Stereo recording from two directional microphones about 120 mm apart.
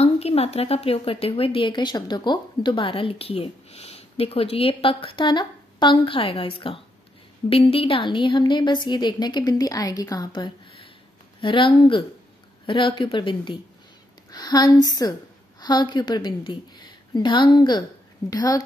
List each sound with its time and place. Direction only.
0.0 s a woman's voice: 60° left (ahead or behind); by 18.6 s 30° left (ahead or behind)